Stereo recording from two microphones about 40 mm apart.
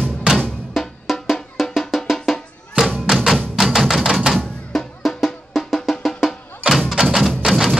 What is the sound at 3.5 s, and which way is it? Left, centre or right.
Music, centre.